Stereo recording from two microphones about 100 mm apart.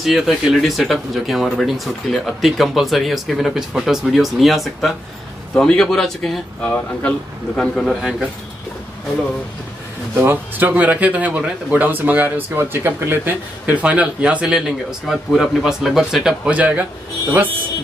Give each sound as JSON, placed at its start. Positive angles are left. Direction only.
{"t": 0.0, "sound": "speech", "side_deg": 0}
{"t": 6.6, "sound": "a man's voice", "side_deg": 15}
{"t": 10.1, "sound": "speech", "side_deg": -20}